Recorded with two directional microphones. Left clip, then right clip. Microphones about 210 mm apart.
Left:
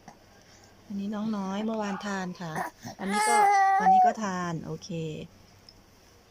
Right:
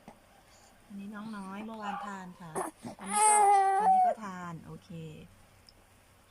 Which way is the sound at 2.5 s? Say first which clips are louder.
Even; 10° right (ahead or behind).